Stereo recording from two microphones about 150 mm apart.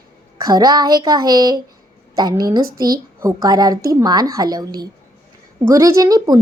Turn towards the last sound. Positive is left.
turn(degrees=-25)  # may be behind; listen again after turning